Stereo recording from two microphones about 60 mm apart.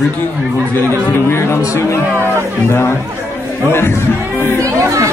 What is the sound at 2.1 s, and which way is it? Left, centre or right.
Speech, right.